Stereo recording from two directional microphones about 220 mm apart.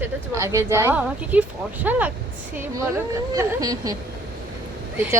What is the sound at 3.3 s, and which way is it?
Speech, 15° right (ahead or behind).